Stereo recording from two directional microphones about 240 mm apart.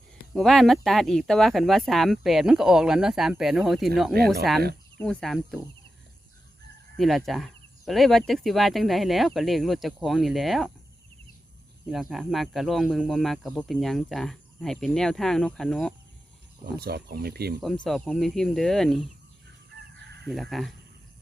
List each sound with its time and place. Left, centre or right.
0.3 s speech: centre
6.9 s speech: centre
11.9 s speech: centre
16.8 s speech: right
17.8 s speech: centre
19.7 s chicken: right
20.2 s speech: centre